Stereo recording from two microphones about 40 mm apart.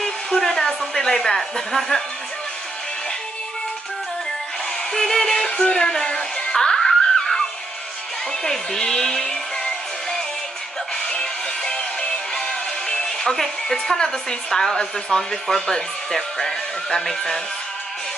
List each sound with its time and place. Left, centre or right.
0.0 s hair dryer: centre
4.9 s music: centre
8.5 s speech: centre
11.1 s music: centre
12.8 s a woman's voice: centre